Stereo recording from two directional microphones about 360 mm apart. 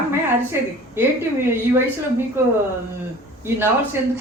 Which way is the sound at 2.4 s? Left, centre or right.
Centre.